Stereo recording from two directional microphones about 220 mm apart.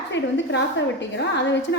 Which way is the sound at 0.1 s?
55° left (ahead or behind).